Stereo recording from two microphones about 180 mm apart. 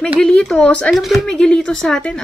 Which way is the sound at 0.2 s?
5° left (ahead or behind).